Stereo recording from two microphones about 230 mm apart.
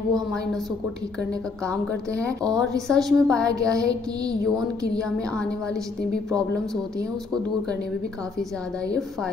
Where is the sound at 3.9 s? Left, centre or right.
Centre.